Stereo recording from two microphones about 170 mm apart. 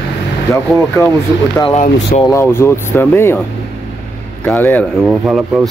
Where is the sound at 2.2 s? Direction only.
15° left (ahead or behind).